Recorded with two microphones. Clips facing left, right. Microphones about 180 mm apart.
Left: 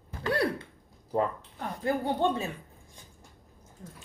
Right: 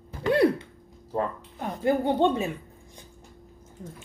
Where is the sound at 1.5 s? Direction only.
20° right (ahead or behind).